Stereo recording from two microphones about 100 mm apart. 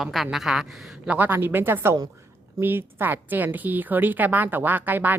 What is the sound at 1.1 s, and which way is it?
A woman's voice, 20° right (ahead or behind).